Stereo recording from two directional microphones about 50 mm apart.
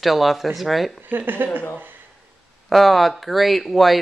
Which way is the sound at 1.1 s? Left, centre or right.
Right.